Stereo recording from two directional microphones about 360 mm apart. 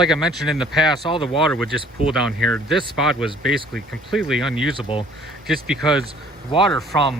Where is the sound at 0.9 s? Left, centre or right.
Centre.